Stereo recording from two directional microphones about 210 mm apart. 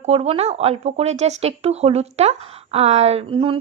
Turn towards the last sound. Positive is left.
turn(degrees=-25)  # may be behind; listen again after turning